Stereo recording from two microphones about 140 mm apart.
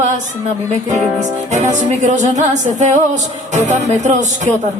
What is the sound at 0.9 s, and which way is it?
Music, 55° right (ahead or behind).